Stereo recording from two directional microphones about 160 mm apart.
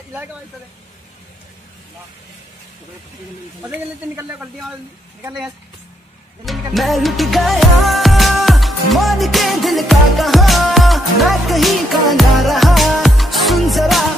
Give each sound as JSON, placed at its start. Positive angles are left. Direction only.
{"t": 3.6, "sound": "speech", "side_deg": -20}
{"t": 4.4, "sound": "speech", "side_deg": 0}
{"t": 6.4, "sound": "music", "side_deg": 0}